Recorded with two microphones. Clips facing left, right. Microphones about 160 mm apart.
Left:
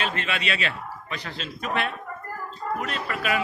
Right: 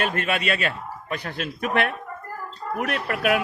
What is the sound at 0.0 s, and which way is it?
A man's voice, 50° right (ahead or behind).